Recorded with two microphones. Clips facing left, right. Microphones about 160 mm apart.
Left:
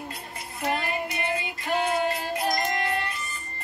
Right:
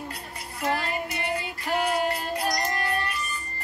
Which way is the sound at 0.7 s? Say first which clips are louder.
Even; 20° left (ahead or behind).